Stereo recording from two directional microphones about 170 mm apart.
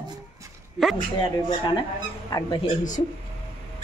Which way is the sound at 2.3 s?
25° left (ahead or behind).